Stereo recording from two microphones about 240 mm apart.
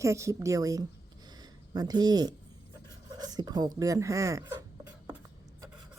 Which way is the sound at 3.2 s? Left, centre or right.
Centre.